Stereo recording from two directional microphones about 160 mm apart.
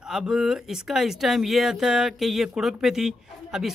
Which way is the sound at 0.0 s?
5° right (ahead or behind).